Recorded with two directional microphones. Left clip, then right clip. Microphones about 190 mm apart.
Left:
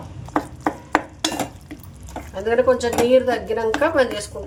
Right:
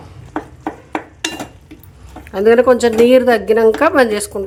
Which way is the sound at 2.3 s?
55° right (ahead or behind).